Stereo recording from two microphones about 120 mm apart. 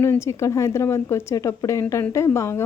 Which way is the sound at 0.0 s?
20° left (ahead or behind).